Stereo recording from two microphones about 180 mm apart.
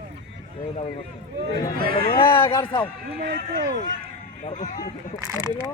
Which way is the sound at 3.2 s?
55° right (ahead or behind).